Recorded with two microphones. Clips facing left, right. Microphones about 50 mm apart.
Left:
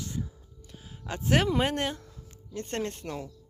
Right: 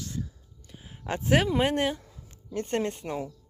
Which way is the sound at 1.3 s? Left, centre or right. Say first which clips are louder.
Right 2 dB; centre.